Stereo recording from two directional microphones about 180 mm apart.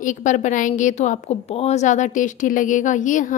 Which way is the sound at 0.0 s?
45° left (ahead or behind).